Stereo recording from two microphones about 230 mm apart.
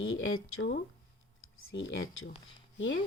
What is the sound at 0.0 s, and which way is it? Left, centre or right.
Speech, left.